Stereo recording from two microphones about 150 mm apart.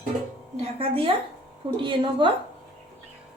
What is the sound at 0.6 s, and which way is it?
A woman's voice, 40° right (ahead or behind).